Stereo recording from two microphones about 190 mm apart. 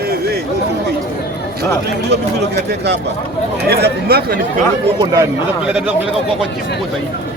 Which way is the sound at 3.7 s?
60° right (ahead or behind).